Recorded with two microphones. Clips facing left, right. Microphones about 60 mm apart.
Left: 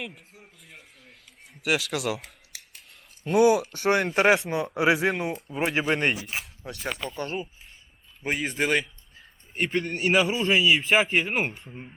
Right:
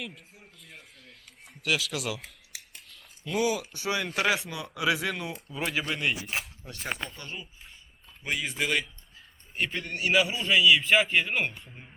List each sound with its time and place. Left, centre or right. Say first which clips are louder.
0.6 s a sound: even; centre
1.9 s a man's voice: left 5 dB; left
3.2 s speech: left 8 dB; left
4.1 s a man's voice: left 7 dB; left
5.9 s speech: left 6 dB; left
6.2 s speech: even; centre
7.2 s a man's voice: left 10 dB; left
11.7 s speech: left 7 dB; centre